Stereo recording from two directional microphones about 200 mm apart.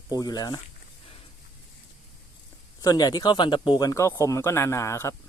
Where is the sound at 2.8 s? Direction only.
20° left (ahead or behind).